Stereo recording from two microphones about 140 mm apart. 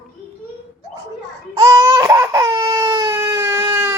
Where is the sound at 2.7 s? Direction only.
25° right (ahead or behind).